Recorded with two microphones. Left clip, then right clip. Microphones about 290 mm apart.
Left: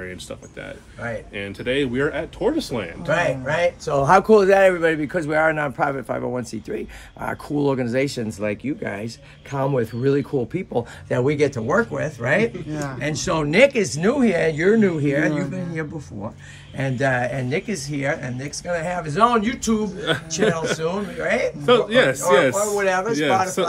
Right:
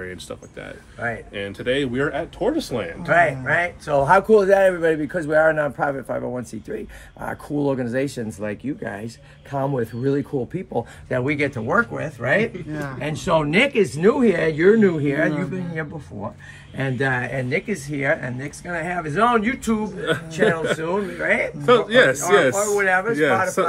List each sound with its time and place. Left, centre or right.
1.0 s a man's voice: centre
3.8 s speech: left
4.2 s a man's voice: centre
11.1 s speech: centre
11.5 s a man's voice: centre
16.7 s a man's voice: centre